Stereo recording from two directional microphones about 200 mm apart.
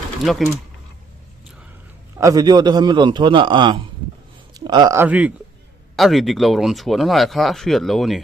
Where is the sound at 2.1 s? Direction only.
15° right (ahead or behind).